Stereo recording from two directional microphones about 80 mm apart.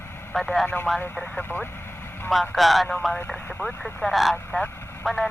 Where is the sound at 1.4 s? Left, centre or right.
Left.